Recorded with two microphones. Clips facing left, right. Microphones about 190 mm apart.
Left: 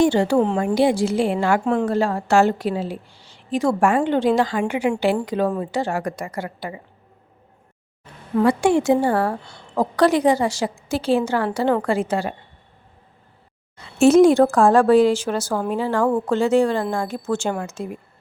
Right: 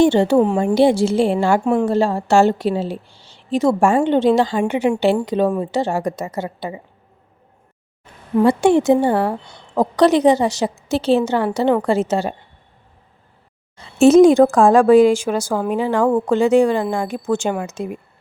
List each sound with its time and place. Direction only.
0.0 s a woman's voice: 25° right (ahead or behind)
0.3 s speech: 10° right (ahead or behind)
0.6 s a woman's voice: 25° right (ahead or behind)
1.6 s speech: 15° right (ahead or behind)
1.9 s a woman's voice: 25° right (ahead or behind)
8.4 s a woman's voice: 25° right (ahead or behind)
13.7 s speech: 20° right (ahead or behind)